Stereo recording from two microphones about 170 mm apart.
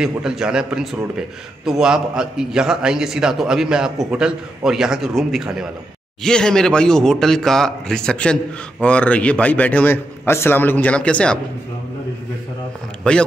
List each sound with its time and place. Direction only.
0.0 s a man's voice: 5° right (ahead or behind)
13.0 s a man's voice: 5° left (ahead or behind)